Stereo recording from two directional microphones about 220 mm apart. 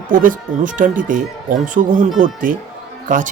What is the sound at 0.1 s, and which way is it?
Speech, 40° right (ahead or behind).